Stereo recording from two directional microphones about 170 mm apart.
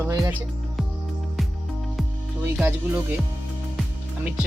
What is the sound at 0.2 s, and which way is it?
Music, 5° right (ahead or behind).